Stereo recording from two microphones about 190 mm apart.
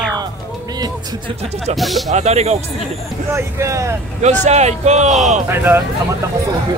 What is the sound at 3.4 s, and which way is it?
Speech, 15° right (ahead or behind).